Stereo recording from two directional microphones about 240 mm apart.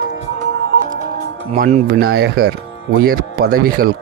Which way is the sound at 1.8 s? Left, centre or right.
Right.